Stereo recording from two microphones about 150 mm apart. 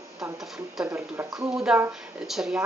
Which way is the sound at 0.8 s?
15° right (ahead or behind).